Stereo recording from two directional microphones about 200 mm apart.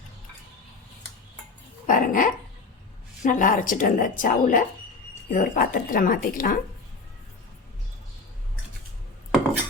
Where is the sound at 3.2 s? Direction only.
40° left (ahead or behind).